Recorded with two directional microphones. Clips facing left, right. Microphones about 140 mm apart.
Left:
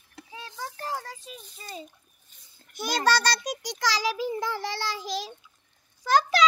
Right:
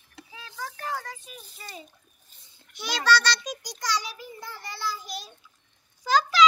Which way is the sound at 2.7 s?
45° left (ahead or behind).